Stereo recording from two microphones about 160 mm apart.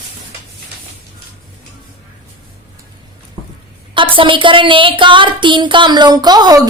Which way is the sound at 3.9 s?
30° right (ahead or behind).